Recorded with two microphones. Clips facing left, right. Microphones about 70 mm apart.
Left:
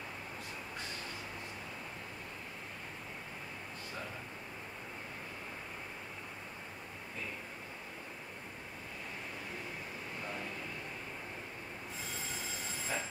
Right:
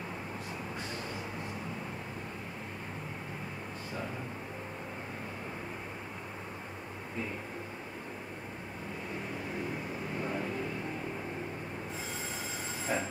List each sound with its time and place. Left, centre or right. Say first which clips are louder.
12.9 s train: right 6 dB; right